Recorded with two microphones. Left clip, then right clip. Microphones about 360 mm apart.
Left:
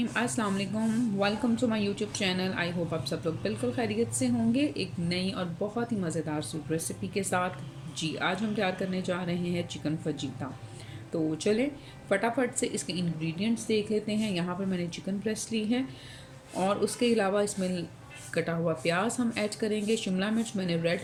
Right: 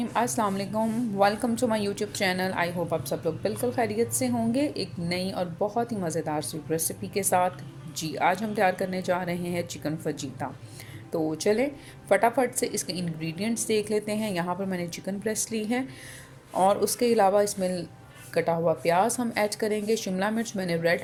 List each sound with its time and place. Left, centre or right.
0.0 s a woman's voice: centre
11.3 s a woman's voice: centre